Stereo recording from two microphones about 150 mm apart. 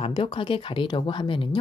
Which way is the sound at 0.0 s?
35° left (ahead or behind).